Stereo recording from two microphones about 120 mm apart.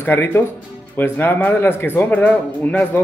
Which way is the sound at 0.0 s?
20° left (ahead or behind).